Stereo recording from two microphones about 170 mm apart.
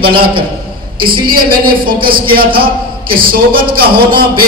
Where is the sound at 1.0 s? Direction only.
30° right (ahead or behind).